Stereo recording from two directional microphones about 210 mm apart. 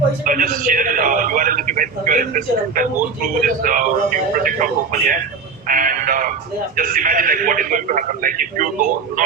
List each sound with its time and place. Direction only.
0.3 s a man's voice: 40° right (ahead or behind)